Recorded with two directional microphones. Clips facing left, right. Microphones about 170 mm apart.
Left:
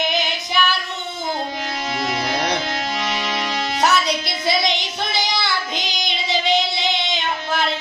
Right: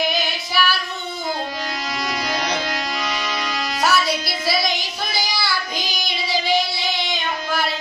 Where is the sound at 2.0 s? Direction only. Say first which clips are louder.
Left 2 dB; 25° left (ahead or behind).